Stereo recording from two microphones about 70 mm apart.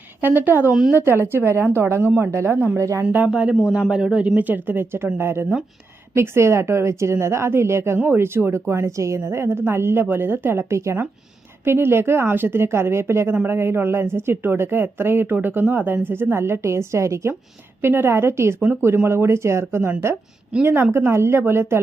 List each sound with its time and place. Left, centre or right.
0.2 s speech: right
0.7 s speech: centre
0.9 s a woman's voice: right
3.0 s speech: right
3.2 s speech: centre
4.4 s a woman's voice: right
20.9 s a woman's voice: right